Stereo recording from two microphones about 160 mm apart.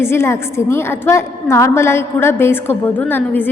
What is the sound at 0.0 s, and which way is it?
A woman's voice, 15° left (ahead or behind).